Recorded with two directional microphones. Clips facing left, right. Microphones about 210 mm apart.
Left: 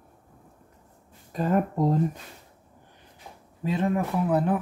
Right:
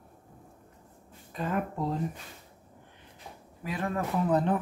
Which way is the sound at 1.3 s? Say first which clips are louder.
Left 7 dB; 40° left (ahead or behind).